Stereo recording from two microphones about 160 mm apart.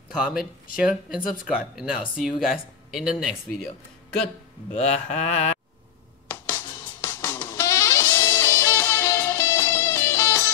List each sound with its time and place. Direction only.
0.2 s speech: 5° right (ahead or behind)
4.7 s mantra: 40° left (ahead or behind)
6.2 s music: 15° left (ahead or behind)